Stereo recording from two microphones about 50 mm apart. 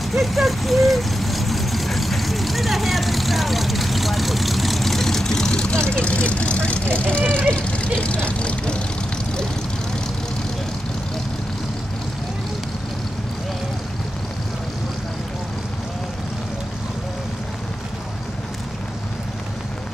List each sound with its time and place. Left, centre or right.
0.0 s vehicle: centre
5.9 s speech: left